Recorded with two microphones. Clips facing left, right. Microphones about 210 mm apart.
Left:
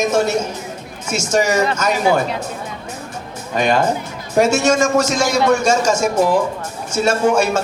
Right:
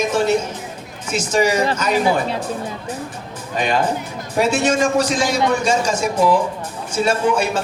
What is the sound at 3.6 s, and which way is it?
A man's voice, 45° left (ahead or behind).